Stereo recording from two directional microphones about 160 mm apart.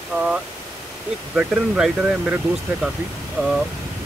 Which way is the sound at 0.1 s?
15° right (ahead or behind).